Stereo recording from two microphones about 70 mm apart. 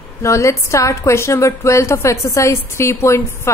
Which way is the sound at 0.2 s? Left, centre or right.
Left.